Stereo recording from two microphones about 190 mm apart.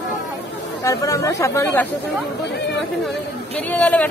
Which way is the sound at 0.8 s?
15° left (ahead or behind).